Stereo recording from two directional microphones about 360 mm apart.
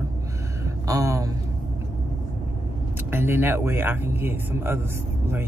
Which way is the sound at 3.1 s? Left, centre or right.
Centre.